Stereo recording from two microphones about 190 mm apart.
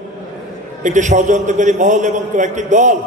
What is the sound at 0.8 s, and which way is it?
A man's voice, 40° right (ahead or behind).